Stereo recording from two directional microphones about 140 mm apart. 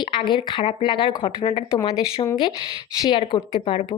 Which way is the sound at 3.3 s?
35° left (ahead or behind).